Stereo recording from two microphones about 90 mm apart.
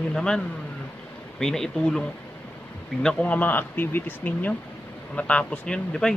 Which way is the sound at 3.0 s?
15° left (ahead or behind).